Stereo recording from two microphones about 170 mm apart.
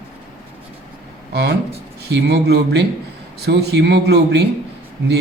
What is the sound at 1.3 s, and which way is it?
Speech, 80° right.